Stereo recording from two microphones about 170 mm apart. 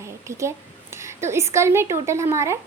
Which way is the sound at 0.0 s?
15° right (ahead or behind).